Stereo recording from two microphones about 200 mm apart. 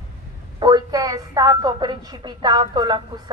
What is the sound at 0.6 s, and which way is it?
A woman's voice, 20° right (ahead or behind).